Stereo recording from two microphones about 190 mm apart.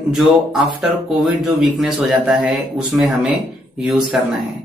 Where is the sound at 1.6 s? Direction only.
Centre (ahead or behind).